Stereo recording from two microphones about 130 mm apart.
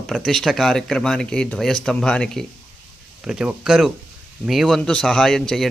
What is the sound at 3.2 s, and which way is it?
A man's voice, 5° right (ahead or behind).